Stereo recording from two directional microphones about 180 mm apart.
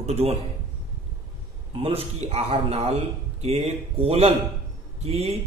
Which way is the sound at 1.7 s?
35° right (ahead or behind).